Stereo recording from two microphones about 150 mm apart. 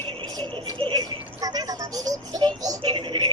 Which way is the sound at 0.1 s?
30° right (ahead or behind).